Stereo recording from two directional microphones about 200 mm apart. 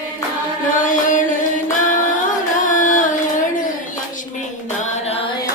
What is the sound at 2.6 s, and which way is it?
Singing, 40° left (ahead or behind).